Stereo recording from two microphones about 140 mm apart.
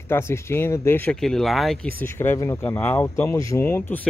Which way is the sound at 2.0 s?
15° left (ahead or behind).